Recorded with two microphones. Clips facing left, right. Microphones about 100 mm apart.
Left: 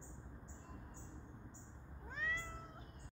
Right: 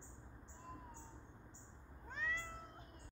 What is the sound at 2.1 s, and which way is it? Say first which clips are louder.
Cat: even; centre (ahead or behind).